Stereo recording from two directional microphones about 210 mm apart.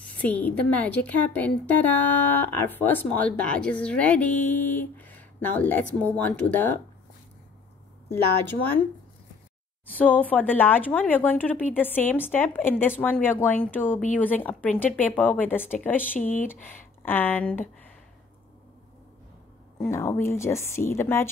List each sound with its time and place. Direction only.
0.2 s a woman's voice: 10° left (ahead or behind)
9.9 s a woman's voice: 5° left (ahead or behind)
16.2 s speech: 35° left (ahead or behind)
16.4 s a woman's voice: 10° left (ahead or behind)
19.8 s a woman's voice: 10° left (ahead or behind)